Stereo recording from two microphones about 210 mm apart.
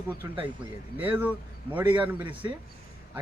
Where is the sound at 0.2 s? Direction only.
15° right (ahead or behind).